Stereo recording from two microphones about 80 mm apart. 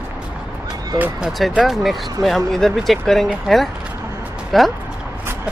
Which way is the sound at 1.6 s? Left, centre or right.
Centre.